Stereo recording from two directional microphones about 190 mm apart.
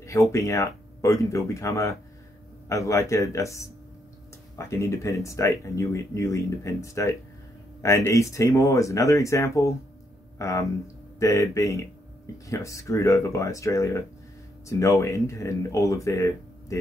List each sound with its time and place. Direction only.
0.0 s speech: 15° left (ahead or behind)